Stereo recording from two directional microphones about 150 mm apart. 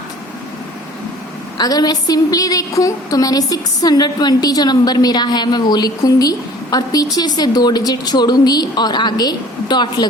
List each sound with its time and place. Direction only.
1.5 s a woman's voice: 25° left (ahead or behind)